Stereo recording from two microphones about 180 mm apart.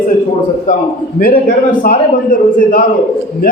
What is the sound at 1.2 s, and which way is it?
A man's voice, 55° left (ahead or behind).